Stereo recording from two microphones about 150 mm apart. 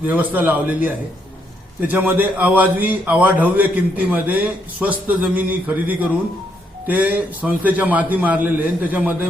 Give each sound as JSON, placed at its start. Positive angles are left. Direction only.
{"t": 0.0, "sound": "a man's voice", "side_deg": -10}